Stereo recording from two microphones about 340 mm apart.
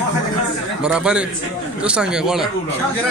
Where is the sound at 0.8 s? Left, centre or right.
Centre.